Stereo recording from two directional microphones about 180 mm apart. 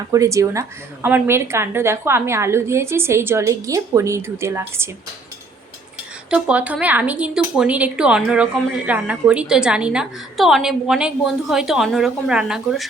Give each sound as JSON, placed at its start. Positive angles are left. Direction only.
{"t": 0.1, "sound": "a woman's voice", "side_deg": -15}
{"t": 6.3, "sound": "speech", "side_deg": -10}